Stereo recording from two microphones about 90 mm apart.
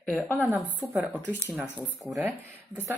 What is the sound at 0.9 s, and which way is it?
Speech, 15° right (ahead or behind).